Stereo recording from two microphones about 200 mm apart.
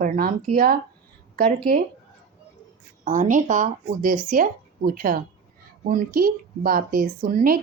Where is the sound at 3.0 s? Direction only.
40° right (ahead or behind).